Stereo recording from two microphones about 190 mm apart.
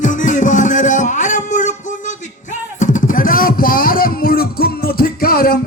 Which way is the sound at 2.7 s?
40° left (ahead or behind).